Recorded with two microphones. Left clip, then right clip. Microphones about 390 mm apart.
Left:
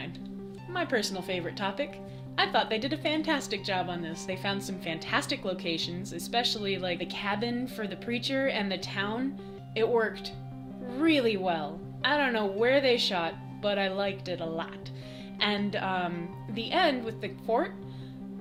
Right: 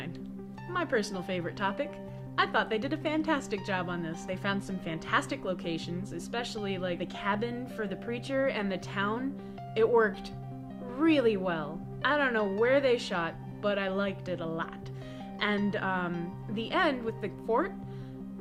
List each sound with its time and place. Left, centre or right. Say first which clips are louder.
0.7 s a woman's voice: left 1 dB; left